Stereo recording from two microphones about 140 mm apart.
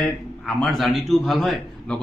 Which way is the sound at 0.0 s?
Centre (ahead or behind).